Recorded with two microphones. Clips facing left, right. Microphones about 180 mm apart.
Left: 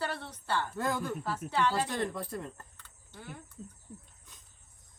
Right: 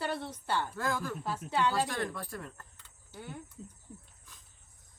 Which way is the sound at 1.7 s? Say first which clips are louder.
Left 1 dB; 20° left (ahead or behind).